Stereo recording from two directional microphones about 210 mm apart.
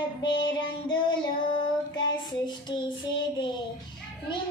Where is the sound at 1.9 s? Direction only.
20° left (ahead or behind).